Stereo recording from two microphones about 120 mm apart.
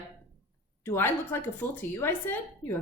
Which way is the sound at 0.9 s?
20° left (ahead or behind).